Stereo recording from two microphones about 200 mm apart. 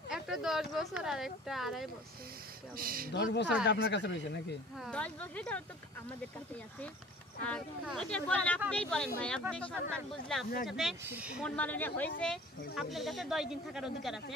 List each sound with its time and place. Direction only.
0.1 s speech: centre (ahead or behind)
2.7 s speech: 45° right (ahead or behind)
3.1 s speech: 55° left (ahead or behind)
4.7 s speech: centre (ahead or behind)
7.4 s speech: 5° left (ahead or behind)
11.5 s a woman's voice: 10° left (ahead or behind)